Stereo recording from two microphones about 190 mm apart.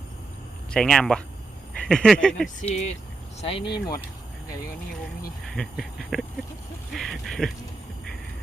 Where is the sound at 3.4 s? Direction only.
30° left (ahead or behind).